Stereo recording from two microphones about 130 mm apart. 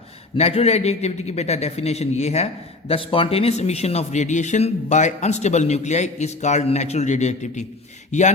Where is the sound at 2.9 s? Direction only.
45° left (ahead or behind); by 8.3 s 65° left (ahead or behind).